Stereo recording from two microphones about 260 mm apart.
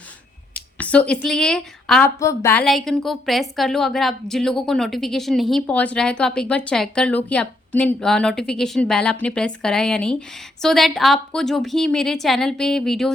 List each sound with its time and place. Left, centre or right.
0.5 s a woman's voice: centre